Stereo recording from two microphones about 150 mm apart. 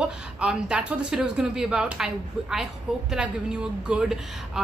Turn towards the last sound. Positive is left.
turn(degrees=-5)  # may be behind; listen again after turning